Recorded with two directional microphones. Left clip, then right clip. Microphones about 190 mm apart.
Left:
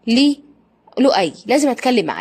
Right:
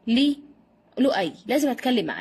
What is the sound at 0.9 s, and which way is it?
A woman's voice, 20° left (ahead or behind).